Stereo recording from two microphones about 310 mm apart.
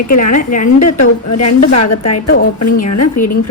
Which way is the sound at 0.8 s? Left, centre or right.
Left.